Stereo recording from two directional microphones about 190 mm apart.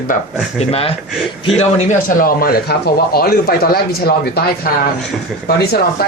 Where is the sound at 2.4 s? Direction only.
55° left (ahead or behind).